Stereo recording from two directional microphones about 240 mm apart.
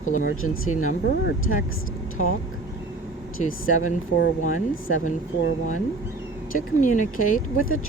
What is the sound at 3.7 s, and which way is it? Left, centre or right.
Speech, left.